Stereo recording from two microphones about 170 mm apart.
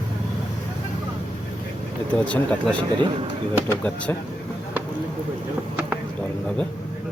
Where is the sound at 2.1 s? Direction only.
5° left (ahead or behind).